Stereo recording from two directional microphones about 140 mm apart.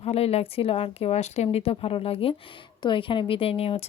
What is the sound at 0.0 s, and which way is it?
A woman's voice, 45° left (ahead or behind).